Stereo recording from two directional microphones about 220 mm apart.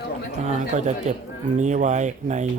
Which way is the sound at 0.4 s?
30° right (ahead or behind).